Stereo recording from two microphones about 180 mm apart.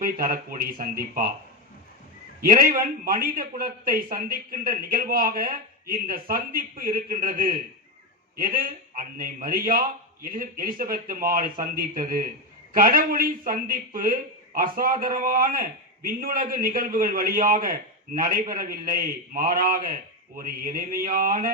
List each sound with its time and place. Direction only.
0.0 s a man's voice: 50° right (ahead or behind)
2.4 s a man's voice: 50° right (ahead or behind)